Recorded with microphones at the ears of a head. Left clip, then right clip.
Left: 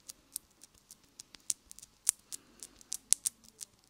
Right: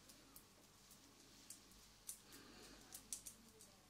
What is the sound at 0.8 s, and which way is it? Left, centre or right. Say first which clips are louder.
Scissors: left 11 dB; left.